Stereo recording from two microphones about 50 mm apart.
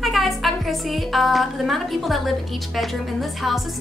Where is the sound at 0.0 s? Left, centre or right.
Centre.